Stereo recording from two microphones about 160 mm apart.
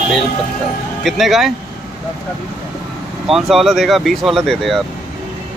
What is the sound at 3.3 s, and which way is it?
Speech, centre (ahead or behind).